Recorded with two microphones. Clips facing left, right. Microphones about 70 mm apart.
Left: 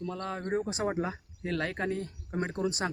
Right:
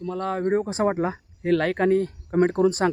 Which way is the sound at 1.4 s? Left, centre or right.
Right.